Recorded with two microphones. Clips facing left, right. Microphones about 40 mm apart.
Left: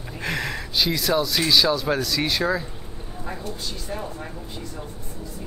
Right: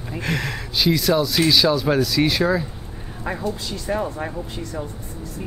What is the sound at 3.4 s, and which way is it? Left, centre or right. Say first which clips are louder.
Speech: right 7 dB; right.